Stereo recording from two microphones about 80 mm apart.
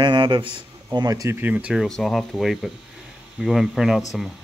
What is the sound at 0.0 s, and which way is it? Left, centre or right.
Speech, right.